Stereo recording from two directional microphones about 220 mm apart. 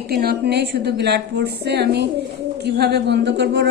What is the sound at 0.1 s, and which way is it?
A woman's voice, 45° right (ahead or behind).